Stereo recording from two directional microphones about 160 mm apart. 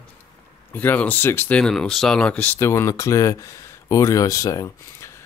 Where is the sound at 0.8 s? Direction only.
10° left (ahead or behind).